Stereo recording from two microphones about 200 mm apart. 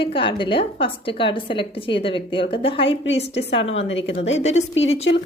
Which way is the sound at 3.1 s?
60° left (ahead or behind).